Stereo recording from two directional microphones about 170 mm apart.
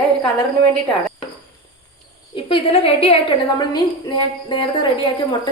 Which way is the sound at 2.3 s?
30° left (ahead or behind).